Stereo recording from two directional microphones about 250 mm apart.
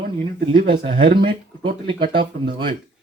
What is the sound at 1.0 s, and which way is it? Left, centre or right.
Speech, right.